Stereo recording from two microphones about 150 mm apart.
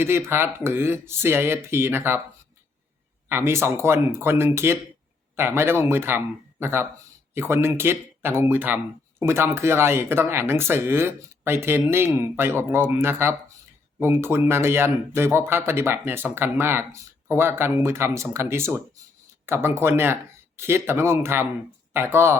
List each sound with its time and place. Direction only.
0.0 s speech: 15° right (ahead or behind)
3.2 s speech: 15° right (ahead or behind)